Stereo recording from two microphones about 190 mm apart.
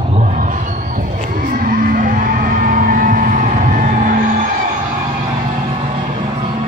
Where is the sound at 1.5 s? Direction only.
50° right (ahead or behind).